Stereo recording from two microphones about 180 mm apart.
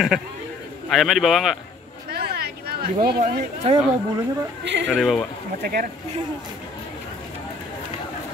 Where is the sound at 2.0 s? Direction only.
60° right (ahead or behind).